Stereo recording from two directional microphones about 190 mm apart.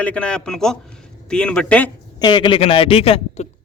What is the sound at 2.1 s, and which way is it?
A man's voice, 25° left (ahead or behind).